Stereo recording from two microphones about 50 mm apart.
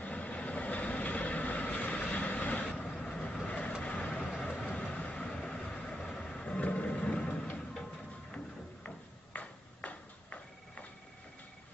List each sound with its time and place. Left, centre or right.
0.0 s vehicle: left
2.9 s vehicle: centre
3.2 s vehicle: left
8.8 s ping: left